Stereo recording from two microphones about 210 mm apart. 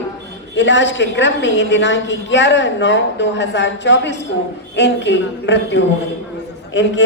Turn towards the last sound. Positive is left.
turn(degrees=60)  # may be behind; listen again after turning